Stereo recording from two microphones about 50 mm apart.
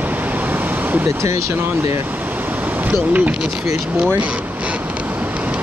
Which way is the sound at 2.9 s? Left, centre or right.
Right.